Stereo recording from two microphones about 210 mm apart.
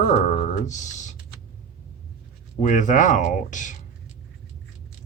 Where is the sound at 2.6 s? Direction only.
35° left (ahead or behind).